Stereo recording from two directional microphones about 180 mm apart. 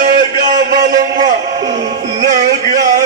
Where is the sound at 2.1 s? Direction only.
45° right (ahead or behind).